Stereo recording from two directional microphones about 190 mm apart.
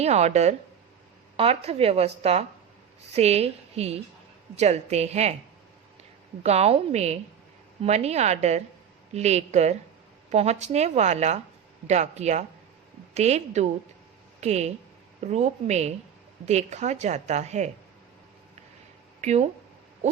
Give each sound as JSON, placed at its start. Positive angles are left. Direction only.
{"t": 0.0, "sound": "a woman's voice", "side_deg": -35}
{"t": 6.4, "sound": "a woman's voice", "side_deg": -35}
{"t": 19.2, "sound": "speech", "side_deg": -35}